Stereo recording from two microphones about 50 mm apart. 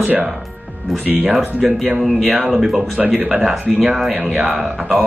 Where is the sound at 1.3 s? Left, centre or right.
Centre.